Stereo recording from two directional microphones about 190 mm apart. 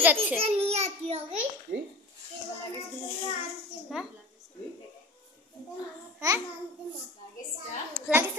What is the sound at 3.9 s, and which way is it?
Child singing, centre (ahead or behind).